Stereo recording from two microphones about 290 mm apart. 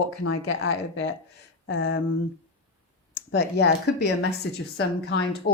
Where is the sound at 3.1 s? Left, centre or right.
Left.